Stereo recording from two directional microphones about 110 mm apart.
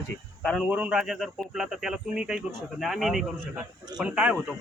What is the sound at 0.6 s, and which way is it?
Speech, 10° right (ahead or behind).